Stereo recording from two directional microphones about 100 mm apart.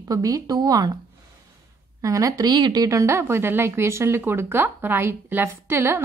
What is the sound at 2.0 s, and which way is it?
Speech, 35° right (ahead or behind).